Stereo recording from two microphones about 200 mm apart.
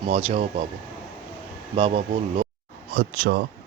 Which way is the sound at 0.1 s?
30° right (ahead or behind).